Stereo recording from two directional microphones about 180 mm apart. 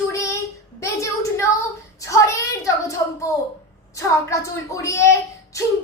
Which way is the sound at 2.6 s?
15° left (ahead or behind).